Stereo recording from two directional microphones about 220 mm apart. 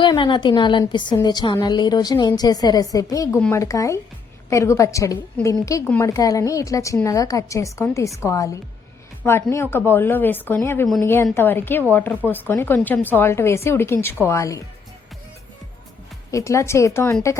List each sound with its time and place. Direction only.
0.0 s a woman's voice: 20° left (ahead or behind)
16.3 s a woman's voice: 15° left (ahead or behind)